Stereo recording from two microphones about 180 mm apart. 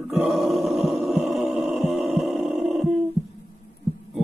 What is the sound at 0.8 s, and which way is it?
Heart sounds, centre (ahead or behind).